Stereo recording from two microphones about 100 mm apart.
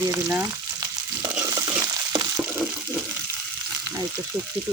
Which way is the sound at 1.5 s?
35° right (ahead or behind).